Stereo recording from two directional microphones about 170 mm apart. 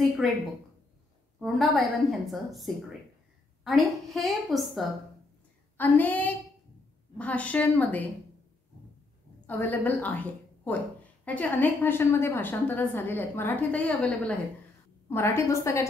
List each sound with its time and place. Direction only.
1.4 s a woman's voice: centre (ahead or behind)
5.8 s a woman's voice: 10° left (ahead or behind)
9.5 s a woman's voice: 10° left (ahead or behind)